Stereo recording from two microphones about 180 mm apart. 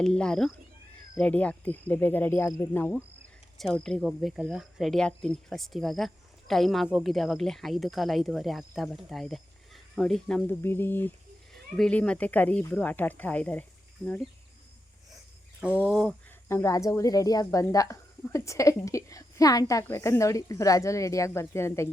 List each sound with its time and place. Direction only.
0.0 s speech: 5° left (ahead or behind)
15.8 s speech: 5° left (ahead or behind)
16.5 s speech: 15° left (ahead or behind)